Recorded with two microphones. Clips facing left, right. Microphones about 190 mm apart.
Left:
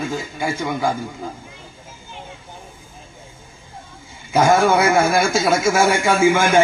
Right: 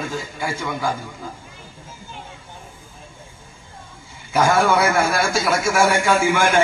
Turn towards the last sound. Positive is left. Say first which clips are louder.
# left 2 dB
turn(degrees=20)  # may be behind; listen again after turning